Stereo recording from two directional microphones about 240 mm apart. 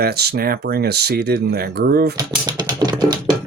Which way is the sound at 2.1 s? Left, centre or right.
Centre.